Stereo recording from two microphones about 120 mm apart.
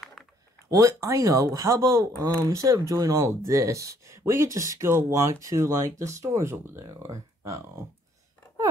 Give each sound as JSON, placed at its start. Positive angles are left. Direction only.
{"t": 0.0, "sound": "typing", "side_deg": 5}
{"t": 0.7, "sound": "speech", "side_deg": -30}